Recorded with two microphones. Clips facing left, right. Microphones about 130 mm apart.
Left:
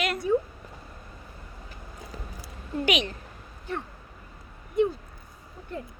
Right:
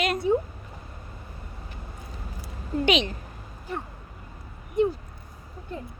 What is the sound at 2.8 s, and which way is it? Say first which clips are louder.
Speech: right 3 dB; 25° right (ahead or behind).